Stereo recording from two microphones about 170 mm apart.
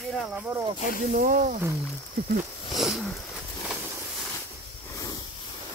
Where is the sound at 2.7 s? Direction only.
Centre (ahead or behind).